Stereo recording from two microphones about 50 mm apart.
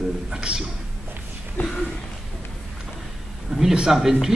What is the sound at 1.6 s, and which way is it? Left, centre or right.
Speech, left.